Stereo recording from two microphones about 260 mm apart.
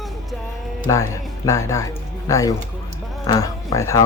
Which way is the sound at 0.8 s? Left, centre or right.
Centre.